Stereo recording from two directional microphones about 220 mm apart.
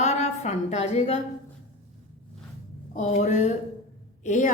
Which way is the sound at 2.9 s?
30° left (ahead or behind).